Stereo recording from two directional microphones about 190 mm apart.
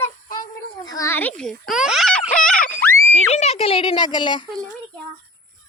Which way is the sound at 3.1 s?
35° left (ahead or behind).